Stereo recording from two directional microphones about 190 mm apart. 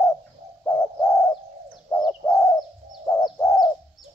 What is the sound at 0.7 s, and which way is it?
Bird, 15° left (ahead or behind).